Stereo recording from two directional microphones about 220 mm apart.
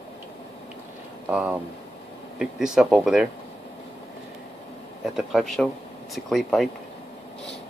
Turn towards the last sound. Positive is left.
turn(degrees=0)  # may be behind; listen again after turning